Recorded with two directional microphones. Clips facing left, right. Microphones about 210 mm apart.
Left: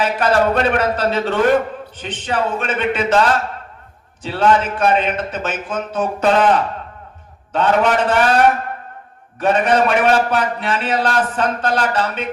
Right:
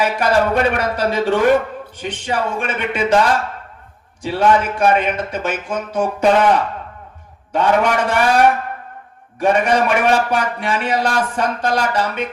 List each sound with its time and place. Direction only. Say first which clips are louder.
0.0 s a man's voice: even; 10° right (ahead or behind)
7.5 s a man's voice: even; 10° right (ahead or behind)